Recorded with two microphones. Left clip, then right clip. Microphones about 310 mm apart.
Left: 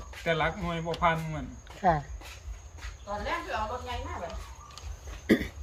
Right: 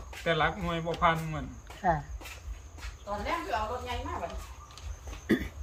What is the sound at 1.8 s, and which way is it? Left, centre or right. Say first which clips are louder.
Speech: left 3 dB; left.